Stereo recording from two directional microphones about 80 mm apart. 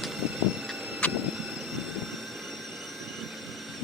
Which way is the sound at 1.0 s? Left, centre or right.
Centre.